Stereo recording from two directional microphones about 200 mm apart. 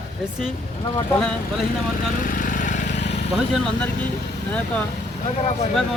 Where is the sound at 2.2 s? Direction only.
40° left (ahead or behind).